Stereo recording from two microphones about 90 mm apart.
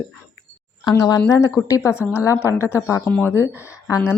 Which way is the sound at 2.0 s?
30° left (ahead or behind).